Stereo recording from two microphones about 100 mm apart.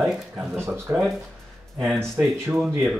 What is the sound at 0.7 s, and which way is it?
Speech, 25° right (ahead or behind).